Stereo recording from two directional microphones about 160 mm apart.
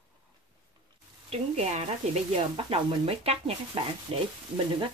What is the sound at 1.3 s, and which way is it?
A woman's voice, 45° right (ahead or behind).